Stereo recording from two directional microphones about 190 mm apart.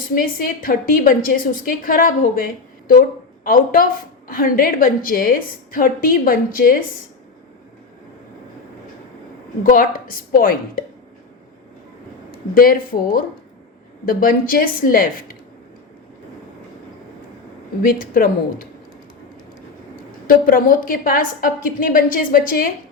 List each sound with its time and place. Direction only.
0.1 s a woman's voice: 50° left (ahead or behind)
9.6 s a woman's voice: 50° left (ahead or behind)
12.5 s a woman's voice: 50° left (ahead or behind)
17.8 s a woman's voice: 50° left (ahead or behind)
20.2 s a woman's voice: 45° left (ahead or behind)